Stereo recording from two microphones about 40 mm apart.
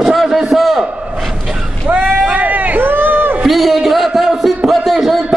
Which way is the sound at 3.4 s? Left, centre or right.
Centre.